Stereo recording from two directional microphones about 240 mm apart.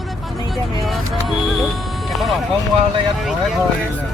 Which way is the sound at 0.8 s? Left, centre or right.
Centre.